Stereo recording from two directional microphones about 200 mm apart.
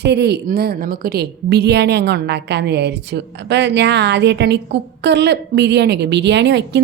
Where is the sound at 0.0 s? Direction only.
55° right (ahead or behind).